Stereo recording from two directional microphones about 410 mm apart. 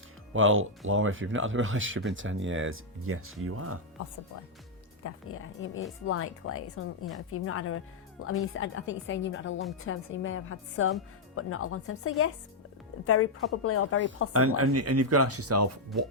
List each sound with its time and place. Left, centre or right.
0.3 s speech: right
5.0 s a woman's voice: left
14.3 s speech: right